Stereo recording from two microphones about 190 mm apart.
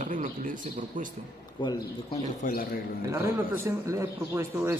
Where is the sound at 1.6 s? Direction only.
25° left (ahead or behind).